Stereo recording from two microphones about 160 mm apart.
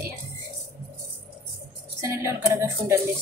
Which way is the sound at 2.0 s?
15° right (ahead or behind).